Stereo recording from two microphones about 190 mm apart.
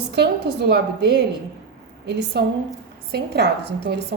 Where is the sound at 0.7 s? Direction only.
60° right (ahead or behind).